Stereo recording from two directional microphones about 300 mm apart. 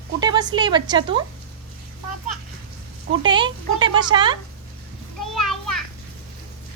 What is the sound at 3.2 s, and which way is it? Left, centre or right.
Speech, centre.